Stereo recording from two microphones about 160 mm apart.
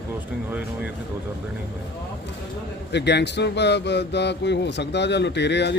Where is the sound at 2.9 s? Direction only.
90° left.